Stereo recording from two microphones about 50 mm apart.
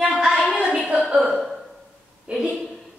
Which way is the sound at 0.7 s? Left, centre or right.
Right.